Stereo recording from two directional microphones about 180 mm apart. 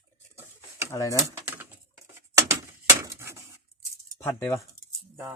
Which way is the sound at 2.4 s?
15° right (ahead or behind).